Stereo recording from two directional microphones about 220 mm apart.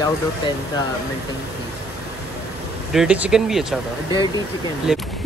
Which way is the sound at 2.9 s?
5° right (ahead or behind).